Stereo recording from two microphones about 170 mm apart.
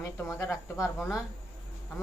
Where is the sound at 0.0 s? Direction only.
15° left (ahead or behind).